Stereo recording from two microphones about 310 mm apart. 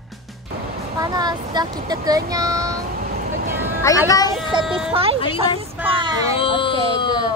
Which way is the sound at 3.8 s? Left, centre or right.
Centre.